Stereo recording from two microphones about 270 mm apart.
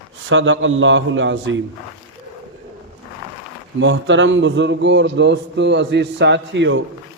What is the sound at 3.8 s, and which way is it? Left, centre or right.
A man's voice, right.